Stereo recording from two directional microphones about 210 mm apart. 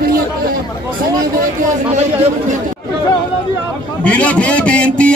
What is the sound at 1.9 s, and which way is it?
Speech, 30° right (ahead or behind).